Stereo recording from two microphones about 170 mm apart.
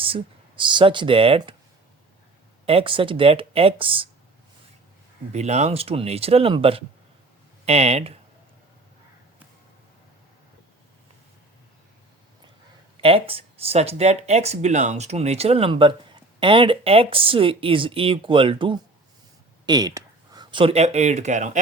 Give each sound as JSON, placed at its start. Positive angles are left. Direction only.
{"t": 0.0, "sound": "speech", "side_deg": -30}
{"t": 2.6, "sound": "speech", "side_deg": -30}
{"t": 5.3, "sound": "speech", "side_deg": -40}
{"t": 13.0, "sound": "speech", "side_deg": -35}